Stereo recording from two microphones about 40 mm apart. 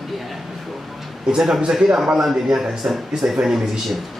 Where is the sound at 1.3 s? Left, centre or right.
Centre.